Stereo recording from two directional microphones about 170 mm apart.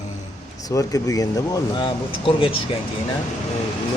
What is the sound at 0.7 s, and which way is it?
Speech, 20° left (ahead or behind).